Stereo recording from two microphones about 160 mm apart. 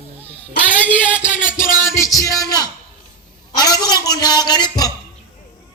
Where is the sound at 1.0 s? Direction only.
10° left (ahead or behind).